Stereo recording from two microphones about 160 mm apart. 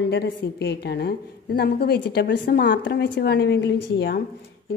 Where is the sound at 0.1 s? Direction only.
90° left.